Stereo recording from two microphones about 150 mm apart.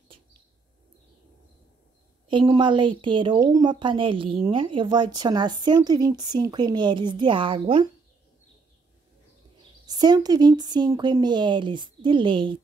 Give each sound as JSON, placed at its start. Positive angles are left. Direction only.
{"t": 2.2, "sound": "speech", "side_deg": -35}
{"t": 9.8, "sound": "speech", "side_deg": -25}